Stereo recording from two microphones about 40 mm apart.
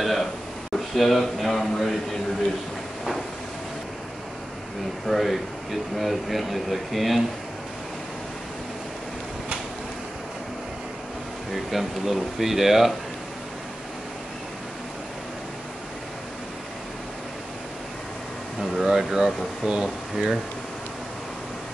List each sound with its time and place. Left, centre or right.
0.0 s a sound: centre
5.0 s speech: centre
11.5 s speech: centre
18.6 s speech: centre